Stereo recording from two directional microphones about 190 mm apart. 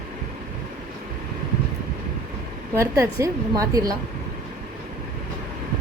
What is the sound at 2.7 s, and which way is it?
A woman's voice, 15° right (ahead or behind).